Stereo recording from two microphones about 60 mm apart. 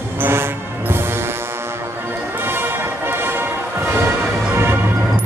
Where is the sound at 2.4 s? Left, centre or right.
Right.